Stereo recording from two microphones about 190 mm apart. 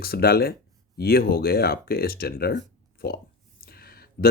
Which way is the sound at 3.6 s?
50° left (ahead or behind).